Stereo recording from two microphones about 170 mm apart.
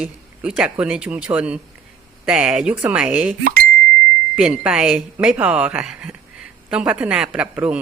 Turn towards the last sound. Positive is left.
turn(degrees=-5)  # may be behind; listen again after turning